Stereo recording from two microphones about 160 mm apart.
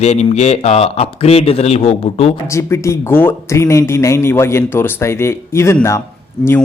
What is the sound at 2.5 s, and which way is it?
Speech, 20° left (ahead or behind).